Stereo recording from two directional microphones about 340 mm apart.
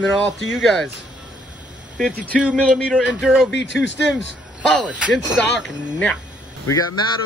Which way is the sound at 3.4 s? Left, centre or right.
Left.